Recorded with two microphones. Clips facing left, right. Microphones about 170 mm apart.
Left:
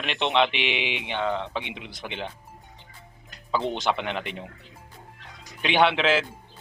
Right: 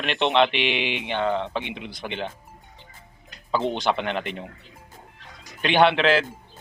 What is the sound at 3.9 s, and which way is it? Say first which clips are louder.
Speech: right 2 dB; 5° left (ahead or behind).